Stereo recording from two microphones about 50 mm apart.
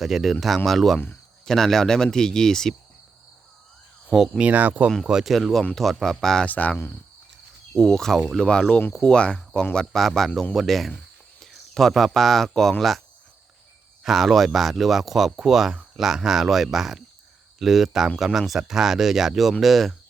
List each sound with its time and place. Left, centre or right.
0.0 s speech: centre
0.9 s speech: left
1.5 s speech: centre
4.4 s speech: right
5.2 s speech: centre
6.4 s speech: left
7.8 s speech: centre
9.1 s speech: left
9.7 s speech: centre
14.0 s speech: centre